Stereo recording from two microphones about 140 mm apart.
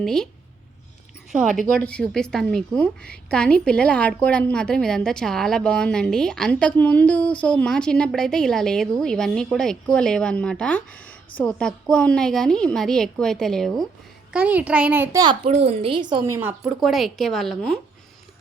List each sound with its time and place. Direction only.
0.0 s a woman's voice: 5° left (ahead or behind)
1.7 s a woman's voice: 5° left (ahead or behind)
14.3 s a child's voice: 10° right (ahead or behind)
15.4 s a woman's voice: 50° right (ahead or behind); by 16.2 s 35° right (ahead or behind)
16.2 s a child's voice: 20° right (ahead or behind)
16.8 s a woman's voice: centre (ahead or behind)